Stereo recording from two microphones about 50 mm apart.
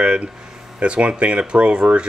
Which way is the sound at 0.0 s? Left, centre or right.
Right.